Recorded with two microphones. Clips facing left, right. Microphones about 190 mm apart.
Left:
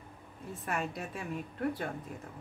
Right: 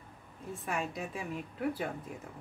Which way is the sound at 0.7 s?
Centre (ahead or behind).